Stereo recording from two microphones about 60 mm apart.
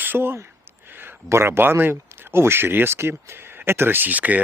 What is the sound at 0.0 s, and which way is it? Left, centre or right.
Speech, right.